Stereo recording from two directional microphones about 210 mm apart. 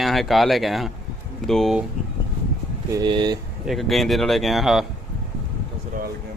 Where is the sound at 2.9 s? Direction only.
20° right (ahead or behind).